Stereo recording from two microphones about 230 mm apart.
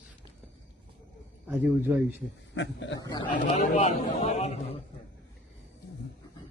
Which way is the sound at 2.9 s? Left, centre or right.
Centre.